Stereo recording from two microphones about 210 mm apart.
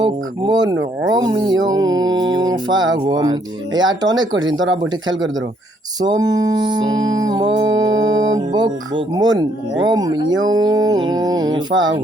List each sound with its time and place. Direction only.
0.0 s speech: 20° right (ahead or behind)
4.4 s speech: 65° right (ahead or behind)
6.0 s speech: 15° right (ahead or behind)
7.9 s music: 70° right (ahead or behind)
8.4 s speech: 20° right (ahead or behind)